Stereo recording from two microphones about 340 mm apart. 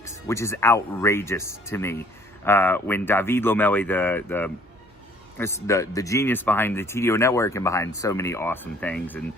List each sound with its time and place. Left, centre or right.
0.0 s speech: centre
5.6 s speech: centre